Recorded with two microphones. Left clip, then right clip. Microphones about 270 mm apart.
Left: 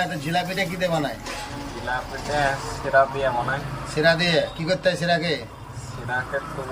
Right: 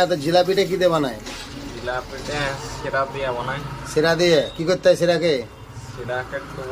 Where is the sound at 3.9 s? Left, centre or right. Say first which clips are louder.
Right 3 dB; centre.